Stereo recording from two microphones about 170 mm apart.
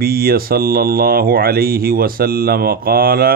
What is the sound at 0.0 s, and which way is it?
Speech, 60° right (ahead or behind).